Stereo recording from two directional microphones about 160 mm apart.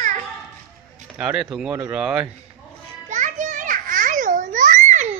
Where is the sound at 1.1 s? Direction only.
5° right (ahead or behind).